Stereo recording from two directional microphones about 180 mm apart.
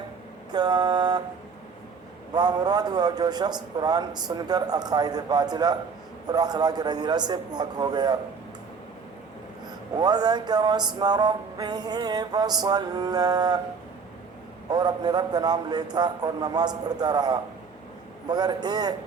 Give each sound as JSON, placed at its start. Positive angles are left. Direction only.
{"t": 0.5, "sound": "music", "side_deg": -25}
{"t": 2.3, "sound": "music", "side_deg": -20}
{"t": 10.0, "sound": "music", "side_deg": -20}
{"t": 14.7, "sound": "music", "side_deg": -20}